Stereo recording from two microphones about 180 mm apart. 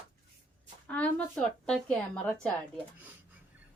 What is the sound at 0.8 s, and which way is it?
A woman's voice, 5° left (ahead or behind).